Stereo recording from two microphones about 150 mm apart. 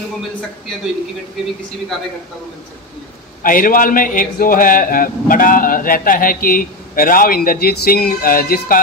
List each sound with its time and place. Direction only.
3.4 s a man's voice: 65° left (ahead or behind)